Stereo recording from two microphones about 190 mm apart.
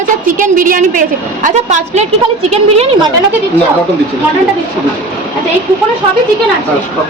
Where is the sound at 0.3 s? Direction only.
45° right (ahead or behind).